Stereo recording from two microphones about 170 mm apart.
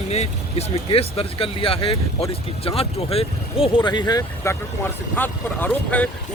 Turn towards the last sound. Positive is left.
turn(degrees=10)  # may be behind; listen again after turning